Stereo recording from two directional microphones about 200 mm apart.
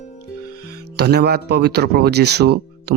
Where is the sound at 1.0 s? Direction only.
55° right (ahead or behind).